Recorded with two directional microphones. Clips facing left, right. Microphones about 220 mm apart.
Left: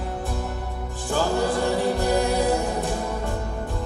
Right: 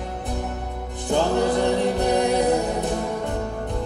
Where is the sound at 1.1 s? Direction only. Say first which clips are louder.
Right 3 dB; 20° right (ahead or behind).